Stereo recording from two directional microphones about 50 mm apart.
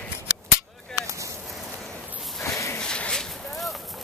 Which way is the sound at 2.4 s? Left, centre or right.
Left.